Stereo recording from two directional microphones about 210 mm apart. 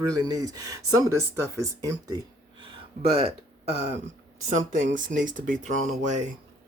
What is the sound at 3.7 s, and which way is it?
Speech, 30° right (ahead or behind).